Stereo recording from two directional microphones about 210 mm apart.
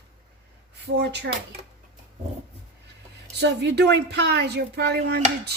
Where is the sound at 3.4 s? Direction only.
55° right (ahead or behind).